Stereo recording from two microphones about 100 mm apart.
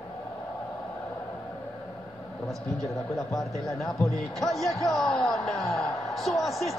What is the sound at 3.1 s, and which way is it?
A man's voice, centre (ahead or behind).